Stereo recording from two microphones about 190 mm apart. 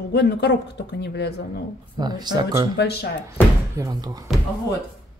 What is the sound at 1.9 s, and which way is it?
Speech, 20° right (ahead or behind).